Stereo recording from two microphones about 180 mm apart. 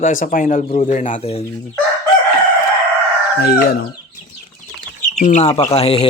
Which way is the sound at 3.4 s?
60° left (ahead or behind).